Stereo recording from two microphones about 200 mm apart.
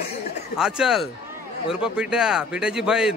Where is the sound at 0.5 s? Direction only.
5° right (ahead or behind).